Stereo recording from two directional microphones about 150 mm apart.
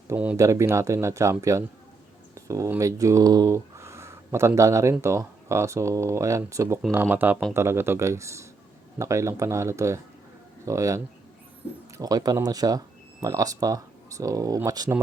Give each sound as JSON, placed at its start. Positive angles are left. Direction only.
{"t": 0.1, "sound": "speech", "side_deg": -10}
{"t": 0.3, "sound": "speech", "side_deg": -20}